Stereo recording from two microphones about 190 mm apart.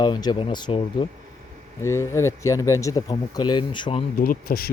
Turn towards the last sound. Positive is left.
turn(degrees=50)  # may be behind; listen again after turning